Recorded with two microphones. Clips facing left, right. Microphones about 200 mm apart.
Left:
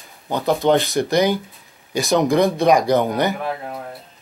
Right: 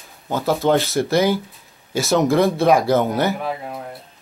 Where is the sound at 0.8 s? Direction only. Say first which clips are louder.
Even; 15° left (ahead or behind).